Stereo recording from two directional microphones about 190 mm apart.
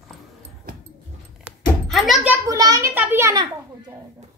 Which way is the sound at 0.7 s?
50° right (ahead or behind).